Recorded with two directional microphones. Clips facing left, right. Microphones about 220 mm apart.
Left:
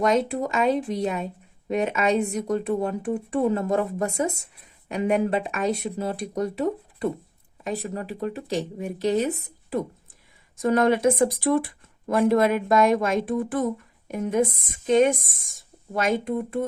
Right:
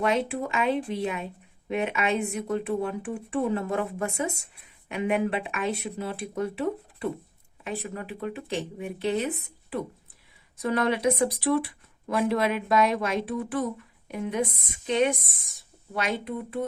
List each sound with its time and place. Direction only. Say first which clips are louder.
0.0 s speech: left 4 dB; 40° left (ahead or behind)